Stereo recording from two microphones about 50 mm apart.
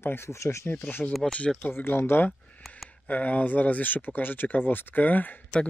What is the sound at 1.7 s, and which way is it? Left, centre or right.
Speech, left.